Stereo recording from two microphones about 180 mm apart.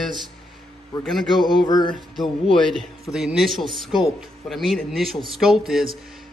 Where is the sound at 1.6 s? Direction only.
25° left (ahead or behind).